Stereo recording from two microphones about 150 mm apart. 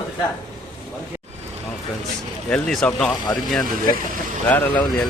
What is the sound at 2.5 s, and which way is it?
Speech, 5° left (ahead or behind).